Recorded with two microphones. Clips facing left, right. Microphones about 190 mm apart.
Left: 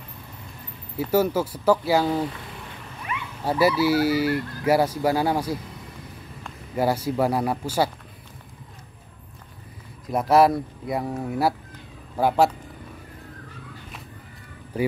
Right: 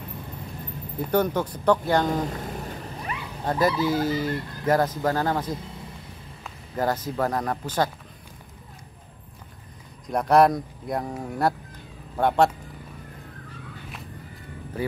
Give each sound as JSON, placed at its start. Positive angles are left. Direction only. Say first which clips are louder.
{"t": 0.9, "sound": "speech", "louder": "left 2 dB", "side_deg": 5}
{"t": 2.2, "sound": "cat", "louder": "right 2 dB", "side_deg": -45}
{"t": 3.4, "sound": "speech", "louder": "left 3 dB", "side_deg": 10}
{"t": 6.7, "sound": "speech", "louder": "left 3 dB", "side_deg": 10}
{"t": 10.0, "sound": "speech", "louder": "left 1 dB", "side_deg": 5}